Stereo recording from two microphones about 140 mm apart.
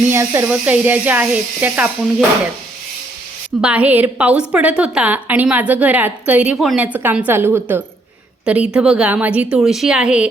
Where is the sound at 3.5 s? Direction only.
10° right (ahead or behind).